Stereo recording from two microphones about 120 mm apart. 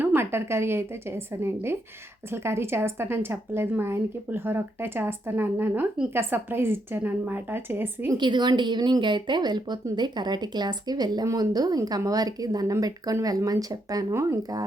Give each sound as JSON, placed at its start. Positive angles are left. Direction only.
{"t": 0.0, "sound": "a woman's voice", "side_deg": -20}
{"t": 8.2, "sound": "a woman's voice", "side_deg": -40}